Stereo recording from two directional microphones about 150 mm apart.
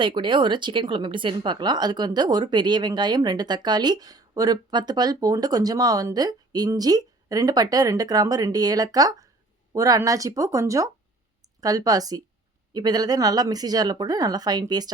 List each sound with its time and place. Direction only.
0.0 s speech: 30° right (ahead or behind)